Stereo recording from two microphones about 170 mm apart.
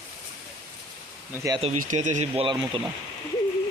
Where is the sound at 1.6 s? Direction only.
45° right (ahead or behind).